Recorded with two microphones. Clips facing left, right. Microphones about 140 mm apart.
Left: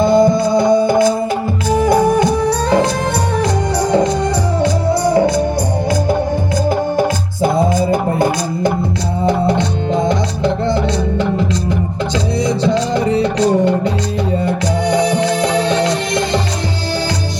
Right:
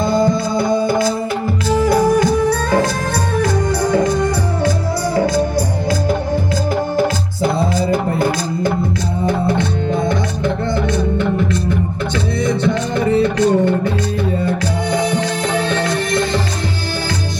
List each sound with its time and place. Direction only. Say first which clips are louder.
0.0 s music: left 5 dB; 20° left (ahead or behind)
6.9 s music: left 1 dB; 15° left (ahead or behind)
14.9 s music: left 3 dB; 15° left (ahead or behind)